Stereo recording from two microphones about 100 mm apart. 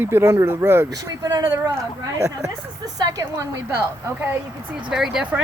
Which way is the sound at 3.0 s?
35° right (ahead or behind).